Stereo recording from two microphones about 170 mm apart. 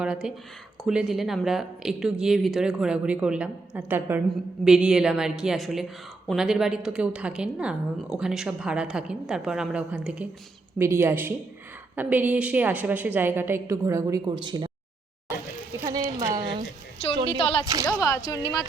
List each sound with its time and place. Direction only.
0.0 s a woman's voice: 5° right (ahead or behind); by 14.7 s 25° right (ahead or behind)
15.8 s a sound: 25° right (ahead or behind)
17.2 s speech: 30° left (ahead or behind)
18.0 s speech: 20° left (ahead or behind)